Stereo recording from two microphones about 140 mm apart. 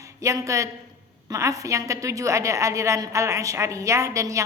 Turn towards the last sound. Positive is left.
turn(degrees=-20)  # may be behind; listen again after turning